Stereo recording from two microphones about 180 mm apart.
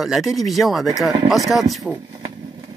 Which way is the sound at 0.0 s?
Centre (ahead or behind).